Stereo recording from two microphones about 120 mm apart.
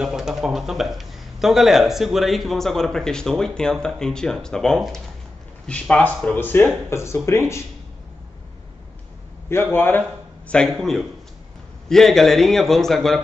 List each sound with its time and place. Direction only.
0.0 s a man's voice: 5° right (ahead or behind); by 7.6 s 25° left (ahead or behind)
9.5 s a man's voice: 20° left (ahead or behind)
10.5 s a man's voice: 5° left (ahead or behind)